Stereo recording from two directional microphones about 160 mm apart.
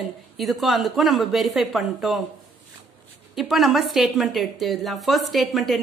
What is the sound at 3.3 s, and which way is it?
A woman's voice, centre (ahead or behind).